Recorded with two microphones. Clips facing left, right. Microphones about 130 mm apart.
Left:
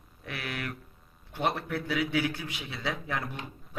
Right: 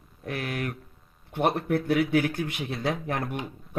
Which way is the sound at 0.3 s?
45° right (ahead or behind).